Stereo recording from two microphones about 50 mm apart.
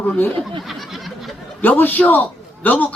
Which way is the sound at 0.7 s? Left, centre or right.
Centre.